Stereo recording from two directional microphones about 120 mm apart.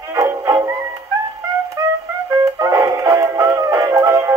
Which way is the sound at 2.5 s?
30° right (ahead or behind).